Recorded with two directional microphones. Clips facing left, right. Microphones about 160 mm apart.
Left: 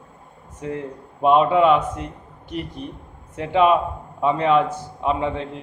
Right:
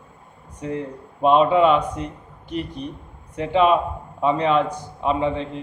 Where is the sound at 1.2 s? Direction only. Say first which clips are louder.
Even; 5° left (ahead or behind).